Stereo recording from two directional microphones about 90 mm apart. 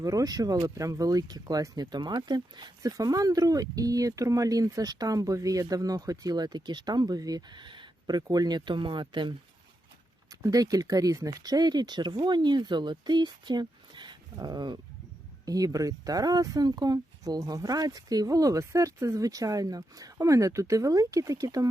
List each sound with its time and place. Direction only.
0.0 s speech: 40° right (ahead or behind); by 2.7 s 55° right (ahead or behind)
2.8 s speech: 40° right (ahead or behind); by 9.3 s 60° right (ahead or behind)
10.4 s speech: 40° right (ahead or behind)
15.4 s speech: 40° right (ahead or behind)